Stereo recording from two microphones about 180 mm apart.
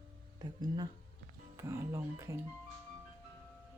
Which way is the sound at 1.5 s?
15° right (ahead or behind).